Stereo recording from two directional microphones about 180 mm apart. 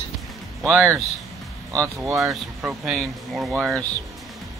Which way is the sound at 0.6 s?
10° right (ahead or behind).